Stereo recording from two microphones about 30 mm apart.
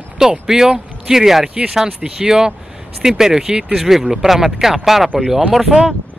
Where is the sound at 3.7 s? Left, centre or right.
Centre.